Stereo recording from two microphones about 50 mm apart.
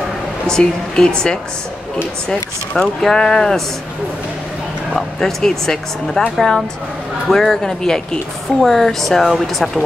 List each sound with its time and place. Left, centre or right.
0.5 s speech: centre
5.2 s a woman's voice: centre